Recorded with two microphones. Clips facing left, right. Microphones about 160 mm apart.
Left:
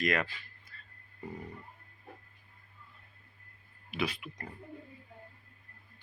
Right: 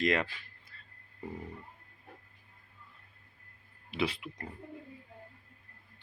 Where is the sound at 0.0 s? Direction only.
25° right (ahead or behind).